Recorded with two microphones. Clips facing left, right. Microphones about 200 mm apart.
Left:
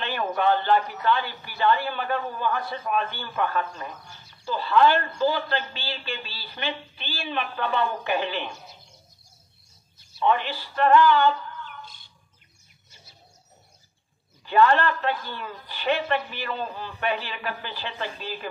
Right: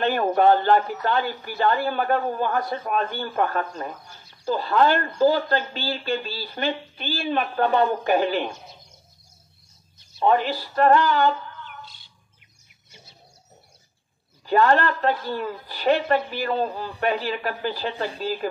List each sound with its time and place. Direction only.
0.0 s speech: 40° right (ahead or behind)
10.2 s speech: 40° right (ahead or behind)
11.8 s bird: 50° left (ahead or behind)
14.4 s speech: 40° right (ahead or behind)